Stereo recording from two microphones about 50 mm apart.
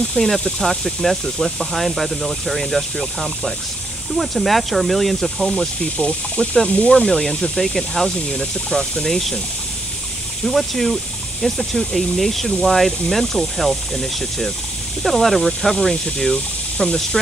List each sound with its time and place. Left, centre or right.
0.0 s speech: centre
5.9 s speech: left
6.9 s speech: centre
10.4 s speech: centre